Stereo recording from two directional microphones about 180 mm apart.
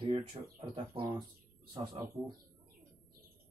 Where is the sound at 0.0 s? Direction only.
30° right (ahead or behind).